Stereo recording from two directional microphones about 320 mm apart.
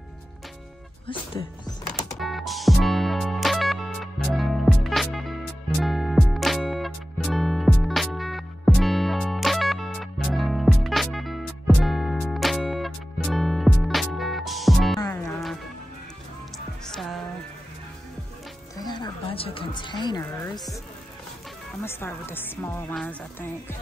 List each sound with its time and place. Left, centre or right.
1.0 s speech: centre
2.1 s music: centre
16.8 s music: centre
18.8 s a sound: centre
21.8 s music: centre